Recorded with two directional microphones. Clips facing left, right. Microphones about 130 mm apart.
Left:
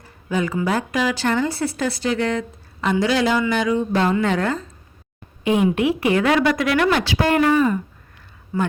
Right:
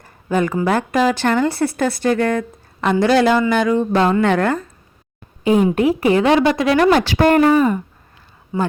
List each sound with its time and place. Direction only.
0.0 s speech: 50° right (ahead or behind)
5.4 s a woman's voice: 35° right (ahead or behind)
6.9 s speech: 50° right (ahead or behind)
8.5 s a man's voice: 20° right (ahead or behind)